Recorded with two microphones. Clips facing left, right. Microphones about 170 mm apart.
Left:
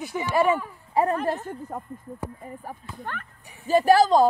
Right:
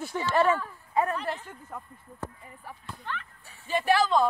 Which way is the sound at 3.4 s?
15° left (ahead or behind).